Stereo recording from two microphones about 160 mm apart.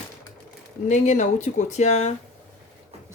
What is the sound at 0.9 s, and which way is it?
Speech, 50° left (ahead or behind).